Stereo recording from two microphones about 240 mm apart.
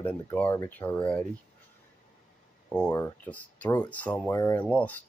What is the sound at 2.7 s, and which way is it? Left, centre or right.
Speech, centre.